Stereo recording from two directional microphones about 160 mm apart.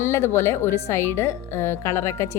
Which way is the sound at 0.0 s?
15° left (ahead or behind).